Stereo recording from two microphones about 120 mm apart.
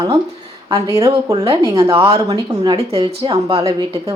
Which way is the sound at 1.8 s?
45° right (ahead or behind).